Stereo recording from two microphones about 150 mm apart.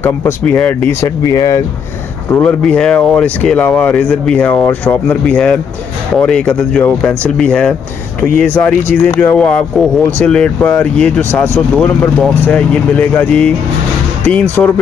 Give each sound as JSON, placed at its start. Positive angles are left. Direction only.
{"t": 0.0, "sound": "speech", "side_deg": 15}
{"t": 1.0, "sound": "speech", "side_deg": 25}
{"t": 2.3, "sound": "speech", "side_deg": 10}